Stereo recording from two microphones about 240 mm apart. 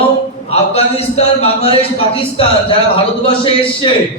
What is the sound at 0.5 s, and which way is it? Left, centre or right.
A man's voice, left.